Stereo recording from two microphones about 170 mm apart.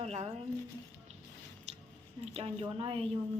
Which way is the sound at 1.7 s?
40° right (ahead or behind).